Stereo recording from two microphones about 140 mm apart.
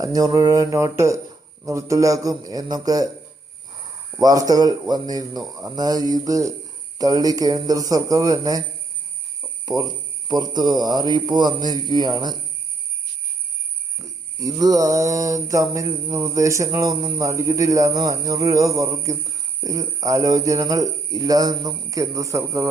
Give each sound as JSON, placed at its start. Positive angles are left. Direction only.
{"t": 0.0, "sound": "speech", "side_deg": -25}
{"t": 4.2, "sound": "speech", "side_deg": -25}
{"t": 9.6, "sound": "speech", "side_deg": -30}
{"t": 14.0, "sound": "a sound", "side_deg": -25}
{"t": 15.4, "sound": "speech", "side_deg": -25}